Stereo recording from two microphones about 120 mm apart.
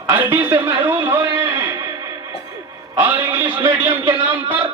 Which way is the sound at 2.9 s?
20° right (ahead or behind).